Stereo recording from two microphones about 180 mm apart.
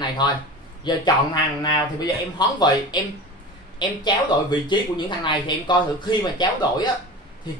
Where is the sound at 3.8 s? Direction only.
25° left (ahead or behind).